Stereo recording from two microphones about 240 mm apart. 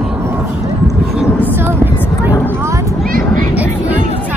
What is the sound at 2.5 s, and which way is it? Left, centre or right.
Vehicle, centre.